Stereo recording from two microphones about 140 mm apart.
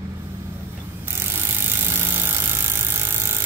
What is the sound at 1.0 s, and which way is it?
Ratchet, 15° right (ahead or behind).